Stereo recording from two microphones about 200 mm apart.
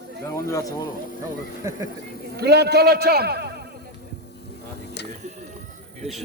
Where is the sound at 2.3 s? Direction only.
55° right (ahead or behind).